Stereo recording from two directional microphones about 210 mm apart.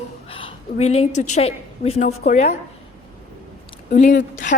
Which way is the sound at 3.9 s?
40° left (ahead or behind).